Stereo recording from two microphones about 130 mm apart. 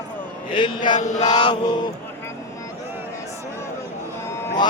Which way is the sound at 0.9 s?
65° left (ahead or behind).